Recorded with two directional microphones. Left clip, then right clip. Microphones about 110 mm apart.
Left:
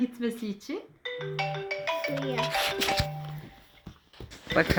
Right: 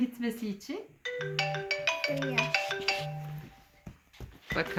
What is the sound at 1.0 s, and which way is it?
Music, 35° left (ahead or behind).